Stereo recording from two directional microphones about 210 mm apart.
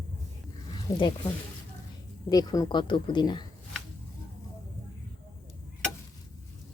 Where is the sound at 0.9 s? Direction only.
20° left (ahead or behind).